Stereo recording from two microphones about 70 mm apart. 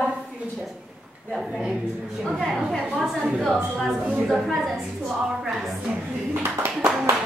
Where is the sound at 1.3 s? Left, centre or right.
Centre.